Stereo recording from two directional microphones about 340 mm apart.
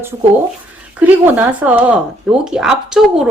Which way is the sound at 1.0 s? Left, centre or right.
Centre.